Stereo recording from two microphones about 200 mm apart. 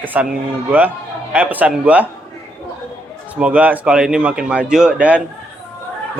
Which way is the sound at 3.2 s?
5° right (ahead or behind).